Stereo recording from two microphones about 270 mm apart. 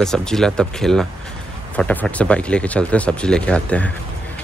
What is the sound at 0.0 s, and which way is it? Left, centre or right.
Speech, centre.